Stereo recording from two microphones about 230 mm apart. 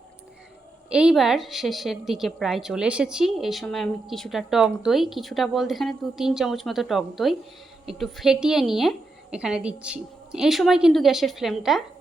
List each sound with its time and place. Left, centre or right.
0.9 s a woman's voice: centre